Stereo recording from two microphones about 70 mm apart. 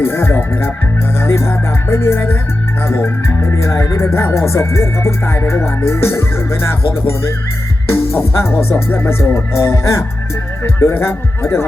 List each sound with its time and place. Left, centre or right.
0.0 s speech: left
7.9 s music: left
8.7 s speech: left